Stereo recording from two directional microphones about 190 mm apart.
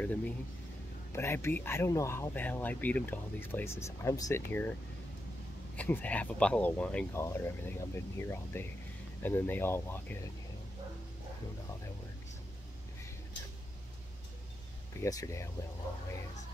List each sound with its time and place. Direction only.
0.0 s speech: 10° left (ahead or behind)
5.8 s speech: 10° left (ahead or behind)
15.0 s speech: 15° left (ahead or behind)